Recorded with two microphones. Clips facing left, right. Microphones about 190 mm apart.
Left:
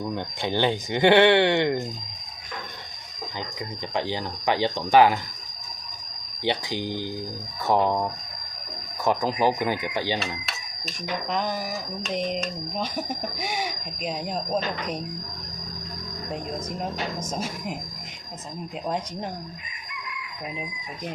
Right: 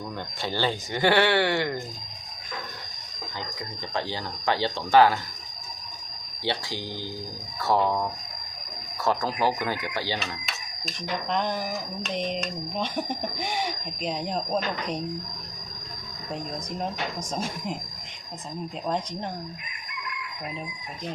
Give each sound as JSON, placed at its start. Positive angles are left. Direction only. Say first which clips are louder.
{"t": 0.1, "sound": "speech", "louder": "left 4 dB", "side_deg": 20}
{"t": 3.9, "sound": "speech", "louder": "left 3 dB", "side_deg": 15}
{"t": 6.4, "sound": "speech", "louder": "left 4 dB", "side_deg": 15}
{"t": 9.0, "sound": "speech", "louder": "left 3 dB", "side_deg": 15}
{"t": 10.4, "sound": "speech", "louder": "even", "side_deg": 5}
{"t": 17.2, "sound": "speech", "louder": "left 1 dB", "side_deg": 5}